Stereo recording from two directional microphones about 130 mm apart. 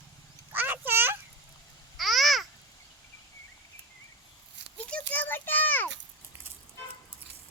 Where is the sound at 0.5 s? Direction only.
15° right (ahead or behind).